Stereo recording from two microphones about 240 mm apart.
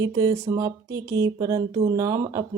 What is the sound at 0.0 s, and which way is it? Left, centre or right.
Speech, centre.